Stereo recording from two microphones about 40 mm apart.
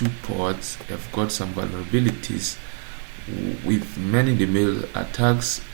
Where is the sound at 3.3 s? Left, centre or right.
Right.